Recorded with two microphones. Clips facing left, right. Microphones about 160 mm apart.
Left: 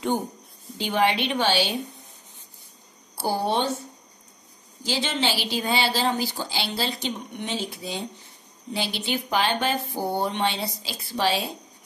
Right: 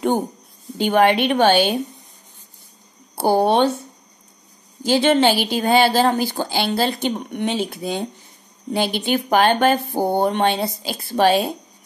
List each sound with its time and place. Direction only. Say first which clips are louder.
0.7 s speech: right 7 dB; 55° right (ahead or behind)
3.2 s speech: right 9 dB; 60° right (ahead or behind)
4.8 s speech: right 11 dB; 55° right (ahead or behind)